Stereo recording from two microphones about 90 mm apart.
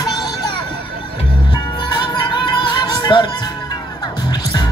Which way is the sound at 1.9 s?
55° left (ahead or behind).